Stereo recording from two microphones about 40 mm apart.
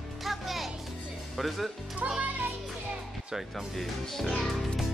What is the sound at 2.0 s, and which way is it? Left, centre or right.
Speech, right.